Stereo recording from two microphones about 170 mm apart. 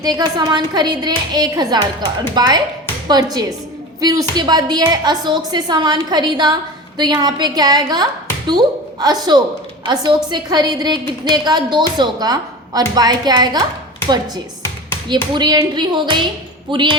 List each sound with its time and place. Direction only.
0.0 s a woman's voice: 25° right (ahead or behind)
15.1 s a woman's voice: 25° right (ahead or behind)